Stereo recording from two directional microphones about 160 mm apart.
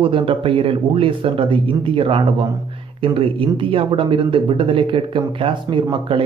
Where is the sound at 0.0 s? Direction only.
30° right (ahead or behind).